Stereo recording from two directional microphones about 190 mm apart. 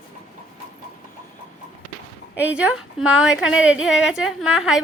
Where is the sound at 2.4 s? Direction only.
5° right (ahead or behind).